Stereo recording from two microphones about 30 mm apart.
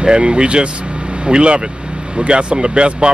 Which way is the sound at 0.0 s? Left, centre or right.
Right.